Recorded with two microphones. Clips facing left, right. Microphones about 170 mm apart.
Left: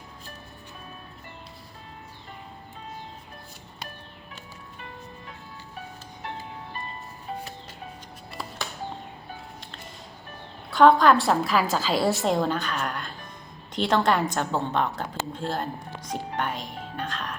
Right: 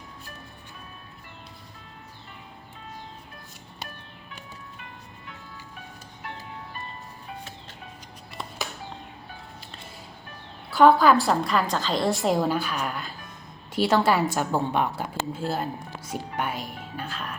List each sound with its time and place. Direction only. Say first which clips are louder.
10.7 s a woman's voice: even; 5° right (ahead or behind)